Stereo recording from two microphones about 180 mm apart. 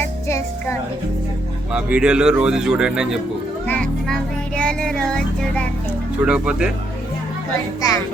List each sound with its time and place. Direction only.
0.3 s music: 15° left (ahead or behind)
1.7 s a child's voice: 5° right (ahead or behind)
7.8 s a woman's voice: 20° left (ahead or behind)